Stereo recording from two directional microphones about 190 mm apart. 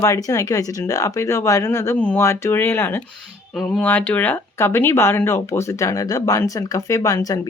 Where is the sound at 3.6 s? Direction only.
Centre (ahead or behind); by 7.4 s 20° left (ahead or behind).